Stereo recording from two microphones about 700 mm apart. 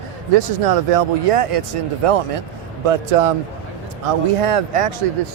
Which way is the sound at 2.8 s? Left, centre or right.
Right.